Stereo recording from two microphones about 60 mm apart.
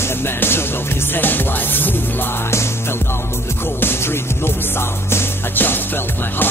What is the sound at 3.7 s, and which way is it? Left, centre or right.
Music, left.